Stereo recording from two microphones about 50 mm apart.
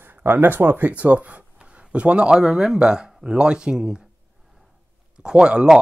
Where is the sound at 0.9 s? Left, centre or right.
Right; by 4.0 s centre.